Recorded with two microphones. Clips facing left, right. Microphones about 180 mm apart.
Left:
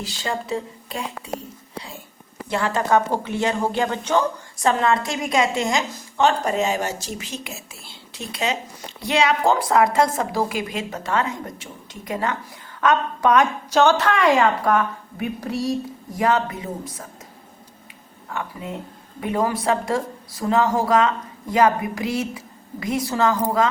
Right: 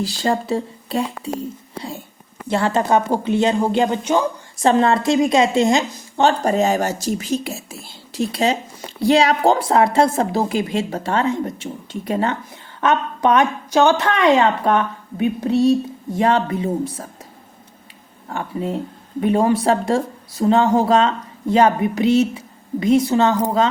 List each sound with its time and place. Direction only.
0.0 s a woman's voice: 35° right (ahead or behind)
2.5 s speech: 30° right (ahead or behind)
4.6 s a woman's voice: 30° right (ahead or behind)
18.3 s a woman's voice: 30° right (ahead or behind)